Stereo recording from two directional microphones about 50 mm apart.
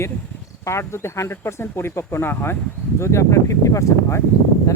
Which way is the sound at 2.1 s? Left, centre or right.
Left.